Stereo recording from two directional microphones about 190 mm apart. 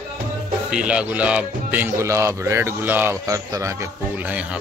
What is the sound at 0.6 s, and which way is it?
Speech, 5° right (ahead or behind).